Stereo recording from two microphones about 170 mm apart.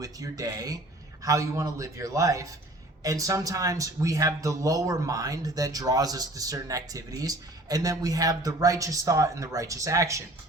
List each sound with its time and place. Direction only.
0.0 s a man's voice: 20° right (ahead or behind)